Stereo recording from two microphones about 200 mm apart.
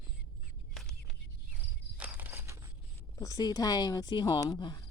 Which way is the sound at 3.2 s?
15° left (ahead or behind).